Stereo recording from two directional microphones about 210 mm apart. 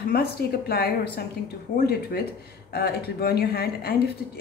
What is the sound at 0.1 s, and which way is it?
Speech, 50° left (ahead or behind).